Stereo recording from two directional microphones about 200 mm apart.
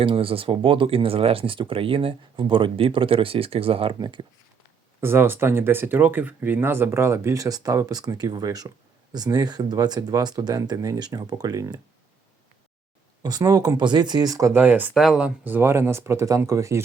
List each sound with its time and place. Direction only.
0.0 s speech: 25° right (ahead or behind)
4.9 s speech: 10° right (ahead or behind)
13.2 s speech: 20° right (ahead or behind)